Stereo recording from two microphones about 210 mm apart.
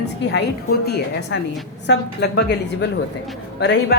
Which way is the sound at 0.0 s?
55° left (ahead or behind).